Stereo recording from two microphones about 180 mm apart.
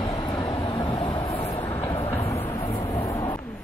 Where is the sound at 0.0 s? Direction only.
20° left (ahead or behind).